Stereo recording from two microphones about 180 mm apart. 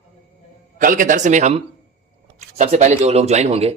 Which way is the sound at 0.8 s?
50° right (ahead or behind).